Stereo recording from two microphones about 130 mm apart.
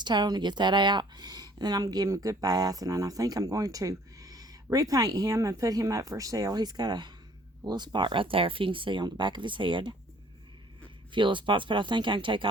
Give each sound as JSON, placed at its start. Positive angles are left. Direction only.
{"t": 0.0, "sound": "speech", "side_deg": -35}
{"t": 11.1, "sound": "speech", "side_deg": -40}